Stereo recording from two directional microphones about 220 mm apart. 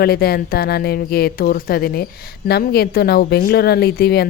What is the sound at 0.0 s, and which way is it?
Speech, 45° left (ahead or behind).